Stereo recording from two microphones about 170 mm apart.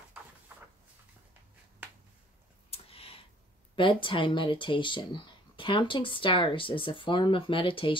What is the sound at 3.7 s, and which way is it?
Speech, 30° left (ahead or behind).